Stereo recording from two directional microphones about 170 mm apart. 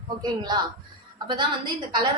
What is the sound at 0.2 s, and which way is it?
A woman's voice, 25° right (ahead or behind).